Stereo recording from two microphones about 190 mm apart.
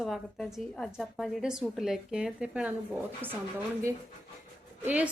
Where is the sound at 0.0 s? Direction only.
Centre (ahead or behind).